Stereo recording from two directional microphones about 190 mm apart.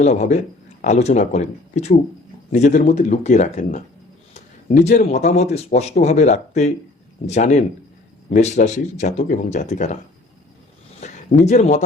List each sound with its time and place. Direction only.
0.0 s speech: 40° left (ahead or behind)
11.0 s speech: 40° left (ahead or behind)